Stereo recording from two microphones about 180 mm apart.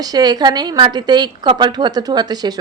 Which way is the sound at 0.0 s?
20° right (ahead or behind).